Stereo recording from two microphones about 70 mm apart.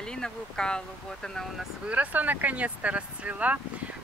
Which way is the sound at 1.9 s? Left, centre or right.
Right.